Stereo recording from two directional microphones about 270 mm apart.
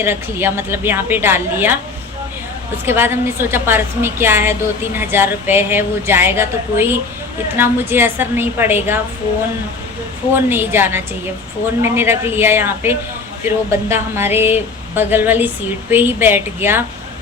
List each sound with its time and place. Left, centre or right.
0.0 s a woman's voice: centre
2.8 s a woman's voice: centre
10.3 s a woman's voice: centre